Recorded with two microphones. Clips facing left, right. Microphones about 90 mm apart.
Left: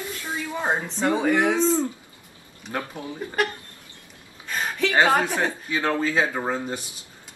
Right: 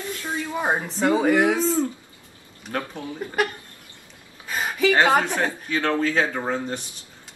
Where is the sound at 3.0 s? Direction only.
15° left (ahead or behind).